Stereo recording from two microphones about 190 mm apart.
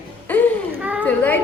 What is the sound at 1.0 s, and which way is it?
Speech, 10° left (ahead or behind).